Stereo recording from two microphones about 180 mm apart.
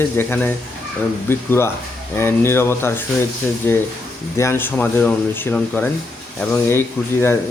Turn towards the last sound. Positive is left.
turn(degrees=15)  # may be behind; listen again after turning